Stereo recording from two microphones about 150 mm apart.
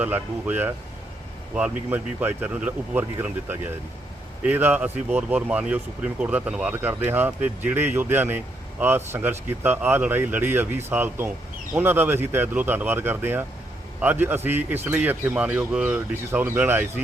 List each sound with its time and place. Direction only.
0.0 s speech: 10° right (ahead or behind)